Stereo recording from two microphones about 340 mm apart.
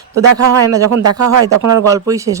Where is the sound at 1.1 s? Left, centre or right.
Right.